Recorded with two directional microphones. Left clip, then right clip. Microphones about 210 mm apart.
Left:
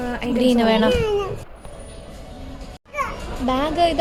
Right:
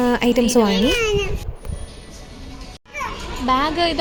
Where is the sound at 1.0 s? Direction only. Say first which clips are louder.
Right 1 dB; 20° left (ahead or behind).